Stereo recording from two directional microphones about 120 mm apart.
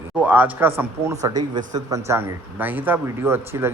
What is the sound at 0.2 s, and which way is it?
Speech, 15° right (ahead or behind).